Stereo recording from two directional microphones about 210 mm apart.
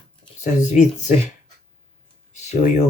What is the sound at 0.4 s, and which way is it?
Speech, 35° left (ahead or behind).